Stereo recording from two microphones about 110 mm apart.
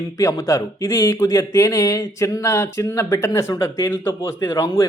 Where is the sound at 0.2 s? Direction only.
30° left (ahead or behind).